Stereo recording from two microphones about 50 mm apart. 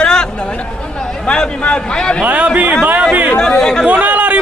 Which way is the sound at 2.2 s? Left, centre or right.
Right.